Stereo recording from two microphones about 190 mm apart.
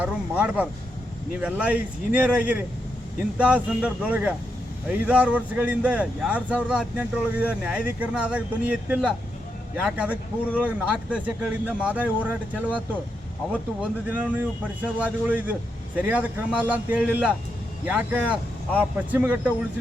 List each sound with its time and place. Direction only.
0.0 s speech: 5° right (ahead or behind)
14.1 s speech: 10° right (ahead or behind)